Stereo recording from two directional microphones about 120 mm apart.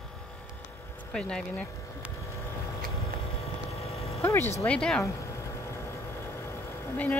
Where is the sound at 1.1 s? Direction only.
5° left (ahead or behind).